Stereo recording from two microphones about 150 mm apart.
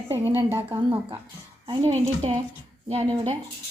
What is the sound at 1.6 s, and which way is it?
Speech, 35° right (ahead or behind).